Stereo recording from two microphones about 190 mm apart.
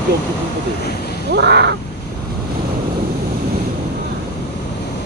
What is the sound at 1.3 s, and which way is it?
Crow, 60° right (ahead or behind).